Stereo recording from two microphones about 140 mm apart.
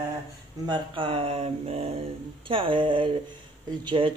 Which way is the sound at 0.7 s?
35° right (ahead or behind).